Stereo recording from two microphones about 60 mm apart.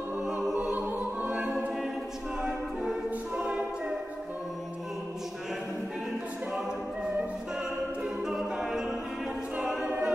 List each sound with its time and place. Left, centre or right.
0.2 s music: centre
0.6 s music: right
3.3 s a capella: centre
8.0 s music: centre
9.6 s choir: centre